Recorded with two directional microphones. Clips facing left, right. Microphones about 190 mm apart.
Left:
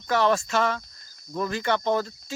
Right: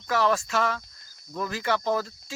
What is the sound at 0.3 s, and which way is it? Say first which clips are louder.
Speech: left 2 dB; centre (ahead or behind).